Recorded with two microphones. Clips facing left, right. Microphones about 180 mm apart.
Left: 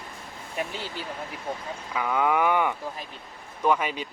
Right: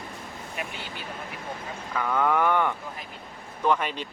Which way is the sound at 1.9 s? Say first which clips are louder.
Even; 10° left (ahead or behind).